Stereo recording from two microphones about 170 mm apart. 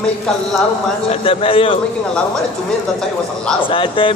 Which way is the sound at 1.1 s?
35° left (ahead or behind).